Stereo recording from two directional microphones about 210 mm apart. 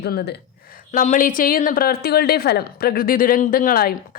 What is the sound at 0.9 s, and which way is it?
A woman's voice, 40° left (ahead or behind).